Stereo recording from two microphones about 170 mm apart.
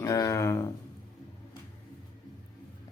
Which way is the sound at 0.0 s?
20° left (ahead or behind).